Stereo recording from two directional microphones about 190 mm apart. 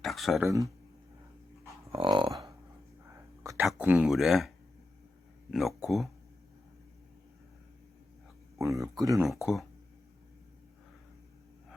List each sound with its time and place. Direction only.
0.0 s a sound: centre (ahead or behind)
0.4 s speech: 15° right (ahead or behind)
1.9 s speech: 25° right (ahead or behind)
3.6 s speech: 5° right (ahead or behind)
8.5 s speech: 15° right (ahead or behind)
9.2 s speech: centre (ahead or behind)